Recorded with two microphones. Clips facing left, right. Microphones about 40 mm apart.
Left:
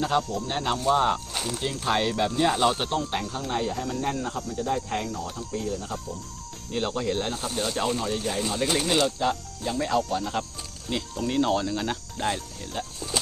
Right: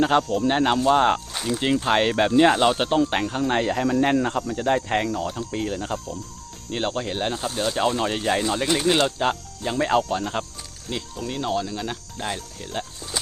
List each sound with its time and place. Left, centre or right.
0.0 s speech: right
0.3 s speech: right
0.5 s speech: right
1.8 s speech: right
2.0 s speech: right
2.6 s speech: right
2.9 s speech: right
3.2 s cricket: right
6.7 s speech: right
7.9 s speech: right
8.9 s speech: right
10.0 s speech: right
10.8 s speech: centre